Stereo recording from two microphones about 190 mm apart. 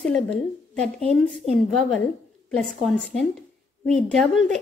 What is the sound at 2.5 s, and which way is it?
A woman's voice, 5° left (ahead or behind).